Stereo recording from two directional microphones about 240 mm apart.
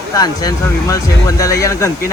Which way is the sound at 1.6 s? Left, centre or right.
Centre.